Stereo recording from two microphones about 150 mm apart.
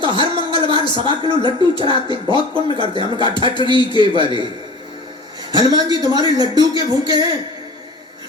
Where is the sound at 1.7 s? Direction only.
35° right (ahead or behind).